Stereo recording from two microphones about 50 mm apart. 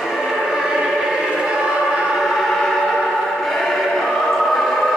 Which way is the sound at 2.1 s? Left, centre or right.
Centre.